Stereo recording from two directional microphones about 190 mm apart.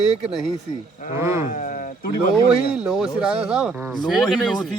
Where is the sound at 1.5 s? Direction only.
45° left (ahead or behind).